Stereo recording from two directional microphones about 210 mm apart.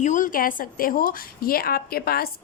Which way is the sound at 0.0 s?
35° left (ahead or behind).